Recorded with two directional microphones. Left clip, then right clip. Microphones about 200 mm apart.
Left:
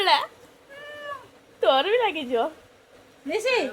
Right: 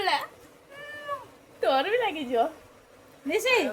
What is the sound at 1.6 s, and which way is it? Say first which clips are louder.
Speech: left 4 dB; 35° left (ahead or behind).